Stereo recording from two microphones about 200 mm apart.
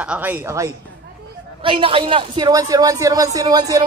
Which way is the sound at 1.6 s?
25° right (ahead or behind).